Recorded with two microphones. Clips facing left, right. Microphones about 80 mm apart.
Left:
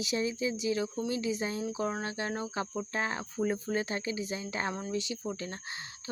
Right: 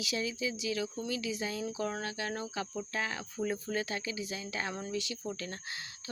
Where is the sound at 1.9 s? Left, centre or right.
Left.